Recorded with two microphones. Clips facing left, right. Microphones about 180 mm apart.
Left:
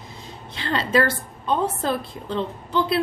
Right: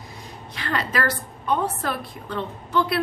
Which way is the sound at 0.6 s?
25° left (ahead or behind).